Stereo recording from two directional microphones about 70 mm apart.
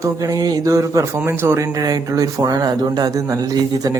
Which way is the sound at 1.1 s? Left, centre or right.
Right.